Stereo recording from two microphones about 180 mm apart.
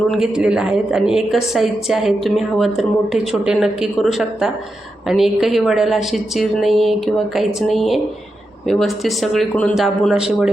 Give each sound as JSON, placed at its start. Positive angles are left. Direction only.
{"t": 0.1, "sound": "a woman's voice", "side_deg": -5}